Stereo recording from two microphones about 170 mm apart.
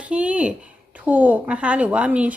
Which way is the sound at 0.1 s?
5° right (ahead or behind).